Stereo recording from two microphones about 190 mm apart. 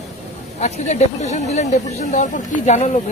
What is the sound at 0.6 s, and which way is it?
Speech, 35° left (ahead or behind).